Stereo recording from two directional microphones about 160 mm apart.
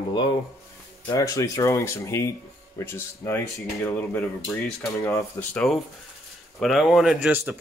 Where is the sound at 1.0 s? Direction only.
20° left (ahead or behind).